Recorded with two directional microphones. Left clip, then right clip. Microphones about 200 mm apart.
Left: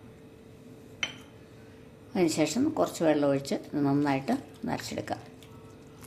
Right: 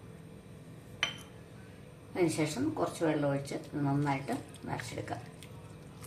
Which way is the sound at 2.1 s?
40° left (ahead or behind).